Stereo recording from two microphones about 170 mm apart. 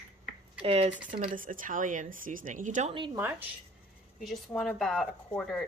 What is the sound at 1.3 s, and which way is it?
A woman's voice, 55° right (ahead or behind).